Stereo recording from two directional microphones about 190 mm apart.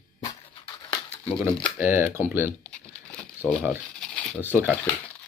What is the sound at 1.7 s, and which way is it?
Speech, 10° right (ahead or behind).